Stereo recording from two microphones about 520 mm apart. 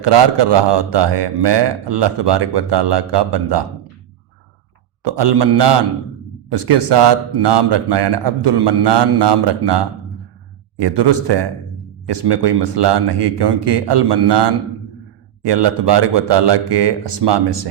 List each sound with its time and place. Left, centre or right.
0.0 s a man's voice: right
5.0 s a man's voice: right